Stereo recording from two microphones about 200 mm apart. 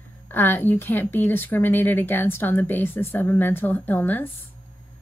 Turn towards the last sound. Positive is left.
turn(degrees=10)  # may be behind; listen again after turning